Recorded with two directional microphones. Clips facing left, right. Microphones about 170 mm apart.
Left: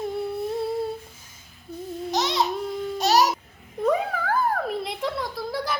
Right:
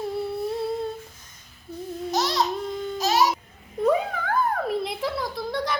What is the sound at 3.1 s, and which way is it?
Babbling, 40° left (ahead or behind).